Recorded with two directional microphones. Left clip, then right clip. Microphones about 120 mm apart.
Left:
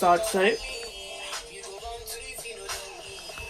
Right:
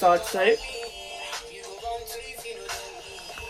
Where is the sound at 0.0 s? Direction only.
55° left (ahead or behind).